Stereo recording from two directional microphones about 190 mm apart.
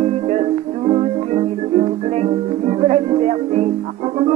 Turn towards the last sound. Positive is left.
turn(degrees=-35)  # may be behind; listen again after turning